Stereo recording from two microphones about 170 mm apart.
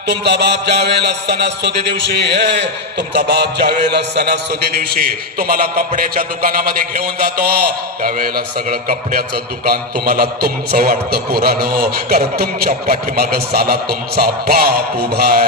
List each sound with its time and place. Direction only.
0.1 s music: 80° right
3.2 s a sound: 75° right (ahead or behind)
5.4 s a man's voice: 60° right (ahead or behind)